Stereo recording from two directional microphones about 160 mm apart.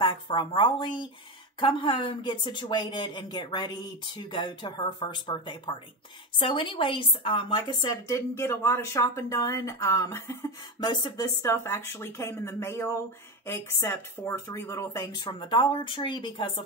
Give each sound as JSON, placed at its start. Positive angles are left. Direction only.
{"t": 0.0, "sound": "speech", "side_deg": 30}
{"t": 10.8, "sound": "speech", "side_deg": 30}
{"t": 11.4, "sound": "speech", "side_deg": 15}